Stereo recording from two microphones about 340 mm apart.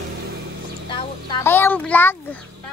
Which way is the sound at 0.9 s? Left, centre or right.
Centre.